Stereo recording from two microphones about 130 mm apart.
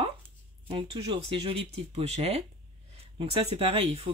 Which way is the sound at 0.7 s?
45° right (ahead or behind).